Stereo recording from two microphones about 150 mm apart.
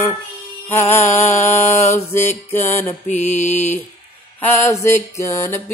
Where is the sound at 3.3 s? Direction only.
50° left (ahead or behind).